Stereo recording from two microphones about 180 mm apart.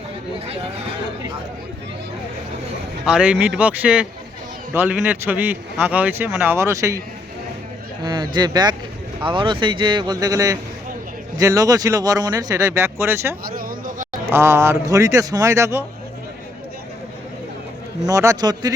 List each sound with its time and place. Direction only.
3.1 s a man's voice: 5° right (ahead or behind)
8.0 s speech: 25° right (ahead or behind)
13.6 s a sound: 50° right (ahead or behind)
14.3 s a man's voice: 15° right (ahead or behind)
18.0 s speech: 20° right (ahead or behind)